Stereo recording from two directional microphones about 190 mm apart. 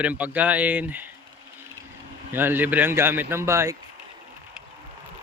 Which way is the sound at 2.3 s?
10° right (ahead or behind).